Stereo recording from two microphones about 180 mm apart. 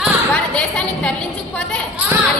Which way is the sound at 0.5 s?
5° left (ahead or behind).